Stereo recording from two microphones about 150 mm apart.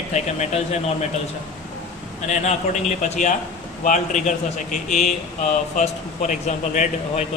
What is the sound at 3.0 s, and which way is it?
A man's voice, 55° left (ahead or behind).